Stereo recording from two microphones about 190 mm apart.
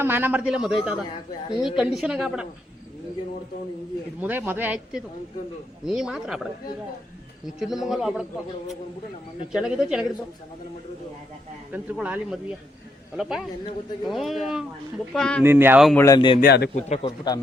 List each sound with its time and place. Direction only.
0.0 s a man's voice: 10° right (ahead or behind)
4.2 s a man's voice: 10° right (ahead or behind)
9.5 s speech: 5° right (ahead or behind)
11.7 s a man's voice: 10° right (ahead or behind)
15.4 s a man's voice: 10° right (ahead or behind)
16.0 s speech: 20° left (ahead or behind)
16.4 s a man's voice: 60° left (ahead or behind)
16.7 s a man's voice: 35° left (ahead or behind)